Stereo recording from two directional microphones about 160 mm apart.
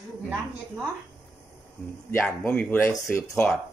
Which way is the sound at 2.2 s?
5° left (ahead or behind).